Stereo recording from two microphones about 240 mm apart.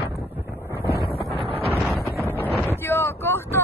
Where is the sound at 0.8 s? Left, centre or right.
Left.